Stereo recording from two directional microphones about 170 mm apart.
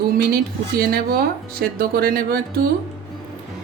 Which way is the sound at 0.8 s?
60° right (ahead or behind).